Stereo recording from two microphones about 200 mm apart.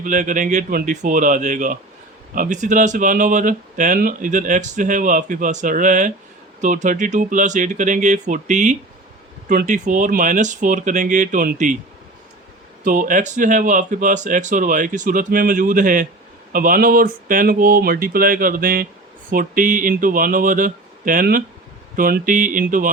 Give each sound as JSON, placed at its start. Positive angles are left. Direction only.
{"t": 0.0, "sound": "speech", "side_deg": -40}
{"t": 12.8, "sound": "speech", "side_deg": -40}